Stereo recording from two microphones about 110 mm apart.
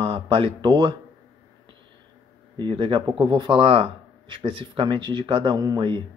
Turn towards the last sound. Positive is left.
turn(degrees=-45)  # may be behind; listen again after turning